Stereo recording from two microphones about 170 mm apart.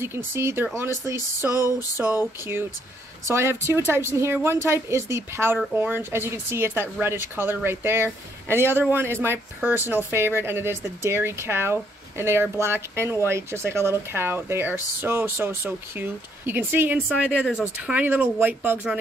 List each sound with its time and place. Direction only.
0.0 s speech: 15° right (ahead or behind)
1.5 s a sound: 20° left (ahead or behind)
2.0 s speech: 15° right (ahead or behind)
17.3 s speech: 10° left (ahead or behind)
17.6 s speech: 5° right (ahead or behind)